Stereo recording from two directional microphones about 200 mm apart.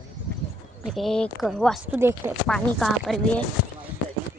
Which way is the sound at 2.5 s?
Centre (ahead or behind).